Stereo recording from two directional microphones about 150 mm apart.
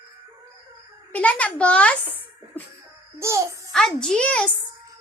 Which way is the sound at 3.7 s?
5° left (ahead or behind).